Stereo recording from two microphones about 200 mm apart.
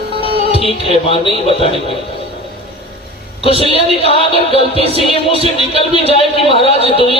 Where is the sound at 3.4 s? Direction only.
30° left (ahead or behind).